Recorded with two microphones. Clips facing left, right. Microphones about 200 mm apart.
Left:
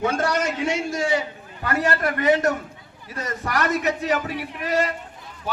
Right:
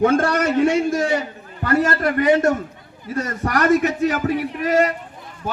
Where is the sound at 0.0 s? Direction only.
55° right (ahead or behind).